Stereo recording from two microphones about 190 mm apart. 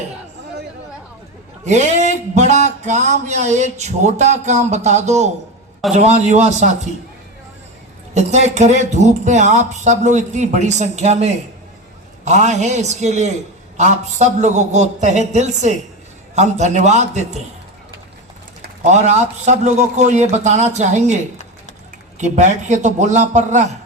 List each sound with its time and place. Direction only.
1.6 s speech: 35° right (ahead or behind)
8.1 s speech: 35° right (ahead or behind)
18.6 s speech: 40° right (ahead or behind)
22.2 s speech: 40° right (ahead or behind)